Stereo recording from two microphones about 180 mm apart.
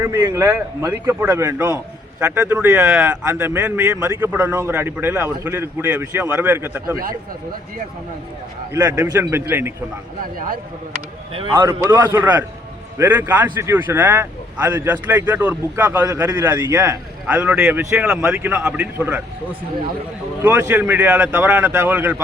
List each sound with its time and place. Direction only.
0.0 s a man's voice: 20° right (ahead or behind)
8.7 s a man's voice: 10° right (ahead or behind)
11.5 s a man's voice: 15° right (ahead or behind)
20.4 s a man's voice: 10° right (ahead or behind)